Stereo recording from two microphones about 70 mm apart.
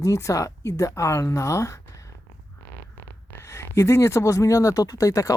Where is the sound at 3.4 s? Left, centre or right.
Left.